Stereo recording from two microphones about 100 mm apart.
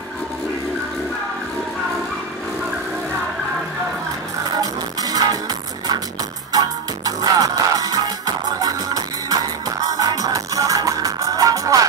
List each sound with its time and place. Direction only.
4.6 s music: 40° right (ahead or behind)